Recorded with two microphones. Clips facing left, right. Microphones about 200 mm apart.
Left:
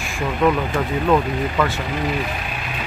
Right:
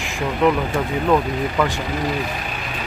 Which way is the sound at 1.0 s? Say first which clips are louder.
Even; 5° right (ahead or behind).